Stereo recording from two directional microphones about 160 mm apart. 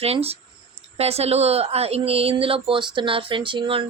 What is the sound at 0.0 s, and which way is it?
A woman's voice, 40° right (ahead or behind).